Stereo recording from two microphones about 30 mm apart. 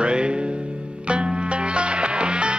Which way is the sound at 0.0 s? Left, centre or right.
Right.